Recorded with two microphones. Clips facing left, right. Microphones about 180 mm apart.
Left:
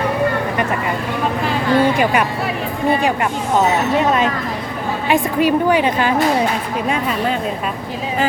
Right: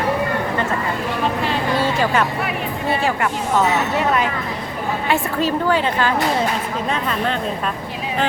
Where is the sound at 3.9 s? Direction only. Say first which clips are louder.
Left 3 dB; 20° left (ahead or behind).